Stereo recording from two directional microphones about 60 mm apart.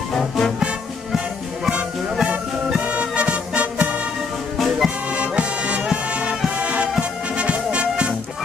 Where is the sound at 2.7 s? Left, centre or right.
Right.